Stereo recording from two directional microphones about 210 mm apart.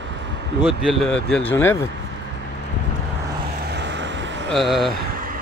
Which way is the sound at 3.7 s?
55° right (ahead or behind).